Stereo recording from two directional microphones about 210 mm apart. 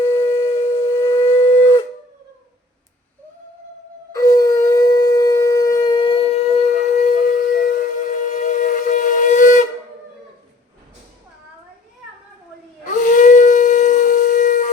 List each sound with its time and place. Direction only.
0.1 s wind instrument: 15° left (ahead or behind)
4.1 s shofar: 15° left (ahead or behind); by 9.6 s 40° left (ahead or behind)
12.8 s howl: 35° left (ahead or behind)